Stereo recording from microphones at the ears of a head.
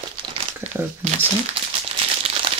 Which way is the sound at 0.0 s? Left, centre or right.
Right.